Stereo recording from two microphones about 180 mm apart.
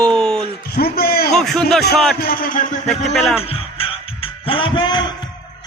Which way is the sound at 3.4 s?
30° left (ahead or behind).